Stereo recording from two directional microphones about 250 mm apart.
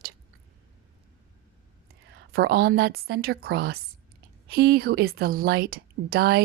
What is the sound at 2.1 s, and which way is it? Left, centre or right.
A woman's voice, right.